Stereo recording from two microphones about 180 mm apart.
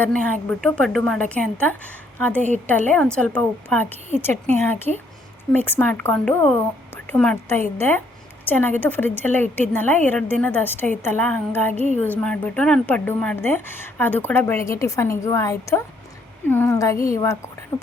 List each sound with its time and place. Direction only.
0.0 s a woman's voice: 5° left (ahead or behind)